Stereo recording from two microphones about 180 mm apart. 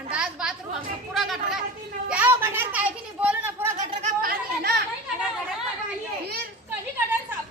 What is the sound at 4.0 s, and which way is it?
Chatter, 55° right (ahead or behind).